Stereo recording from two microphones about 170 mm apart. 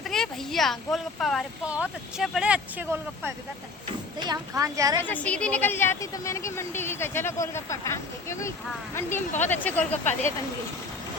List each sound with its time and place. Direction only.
0.0 s speech: centre (ahead or behind)
4.2 s speech: 20° right (ahead or behind)
5.0 s a woman's voice: 10° left (ahead or behind)